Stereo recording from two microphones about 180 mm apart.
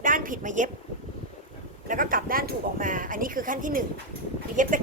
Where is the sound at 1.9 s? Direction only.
50° right (ahead or behind).